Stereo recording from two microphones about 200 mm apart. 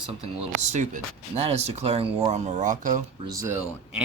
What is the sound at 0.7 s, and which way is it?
Speech, 35° right (ahead or behind).